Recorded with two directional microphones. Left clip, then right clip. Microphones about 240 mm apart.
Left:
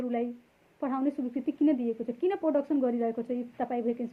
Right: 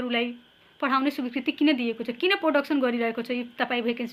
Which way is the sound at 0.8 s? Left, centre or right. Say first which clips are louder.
Right 6 dB; centre.